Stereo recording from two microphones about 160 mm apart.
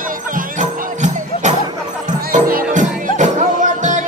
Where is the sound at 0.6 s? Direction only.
50° right (ahead or behind).